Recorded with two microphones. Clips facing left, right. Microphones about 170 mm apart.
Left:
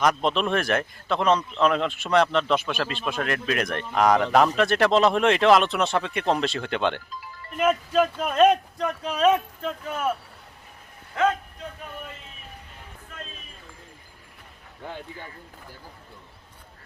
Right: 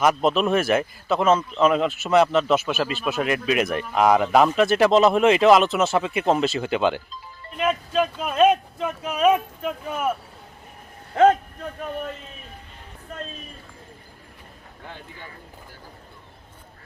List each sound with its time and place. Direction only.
0.0 s a man's voice: 5° right (ahead or behind)
11.1 s a man's voice: 35° right (ahead or behind)
13.1 s a sound: 40° right (ahead or behind)